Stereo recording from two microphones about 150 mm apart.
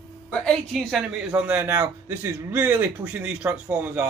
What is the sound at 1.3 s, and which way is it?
A man's voice, 10° right (ahead or behind).